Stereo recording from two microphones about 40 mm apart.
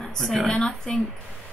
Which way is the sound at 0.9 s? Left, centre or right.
Centre.